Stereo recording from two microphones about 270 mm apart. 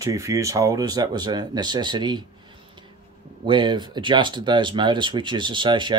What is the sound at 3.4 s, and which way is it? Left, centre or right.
Speech, centre.